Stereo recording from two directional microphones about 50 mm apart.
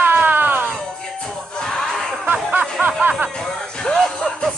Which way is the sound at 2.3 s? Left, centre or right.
Right.